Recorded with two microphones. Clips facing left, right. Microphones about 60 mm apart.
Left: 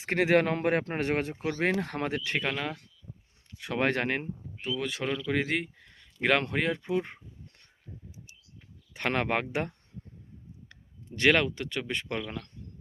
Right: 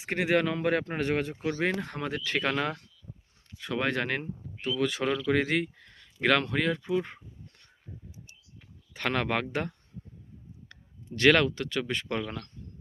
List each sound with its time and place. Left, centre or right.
0.0 s speech: left
1.8 s speech: left
2.3 s speech: centre
3.7 s speech: left
4.6 s speech: centre
6.2 s speech: left
9.0 s speech: left
11.1 s speech: centre